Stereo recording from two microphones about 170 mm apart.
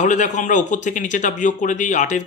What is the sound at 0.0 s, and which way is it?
Speech, 45° left (ahead or behind).